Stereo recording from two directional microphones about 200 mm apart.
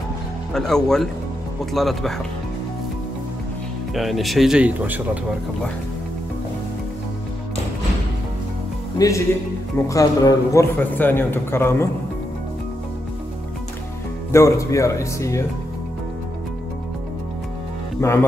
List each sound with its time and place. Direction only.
0.5 s speech: centre (ahead or behind)
3.9 s speech: centre (ahead or behind)
8.9 s a man's voice: 15° left (ahead or behind)
14.3 s a man's voice: 15° left (ahead or behind)
18.0 s a man's voice: 15° left (ahead or behind)